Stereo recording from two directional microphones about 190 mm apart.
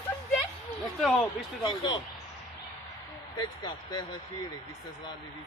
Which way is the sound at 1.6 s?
25° left (ahead or behind).